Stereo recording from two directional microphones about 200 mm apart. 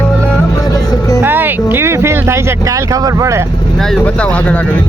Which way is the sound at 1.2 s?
10° right (ahead or behind).